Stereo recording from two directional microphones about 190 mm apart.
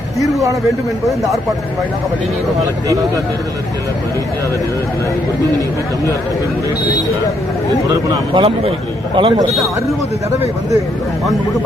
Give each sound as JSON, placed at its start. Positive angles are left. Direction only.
{"t": 2.6, "sound": "speech", "side_deg": -15}
{"t": 8.3, "sound": "a man's voice", "side_deg": -30}